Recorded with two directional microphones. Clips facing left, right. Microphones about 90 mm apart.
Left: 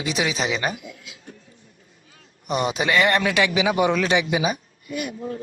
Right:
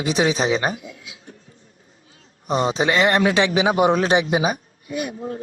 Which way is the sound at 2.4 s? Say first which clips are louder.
Right 3 dB; 30° right (ahead or behind).